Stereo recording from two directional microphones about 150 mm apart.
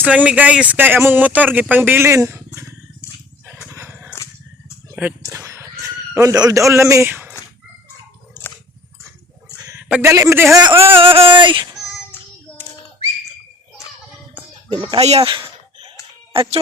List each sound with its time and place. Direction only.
0.0 s speech: 10° right (ahead or behind)
3.7 s dog: 15° right (ahead or behind)
4.9 s a sound: 10° right (ahead or behind)
5.3 s speech: 20° right (ahead or behind)
8.3 s dog: 15° left (ahead or behind)
10.0 s speech: 15° right (ahead or behind)
10.8 s a sound: 35° right (ahead or behind)
11.8 s child singing: 15° left (ahead or behind)
14.7 s a sound: 30° right (ahead or behind)
15.0 s speech: 45° right (ahead or behind)
15.3 s a sound: 30° right (ahead or behind)
16.3 s speech: 35° right (ahead or behind)